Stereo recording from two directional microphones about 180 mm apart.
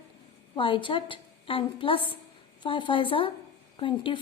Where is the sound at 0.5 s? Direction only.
30° left (ahead or behind).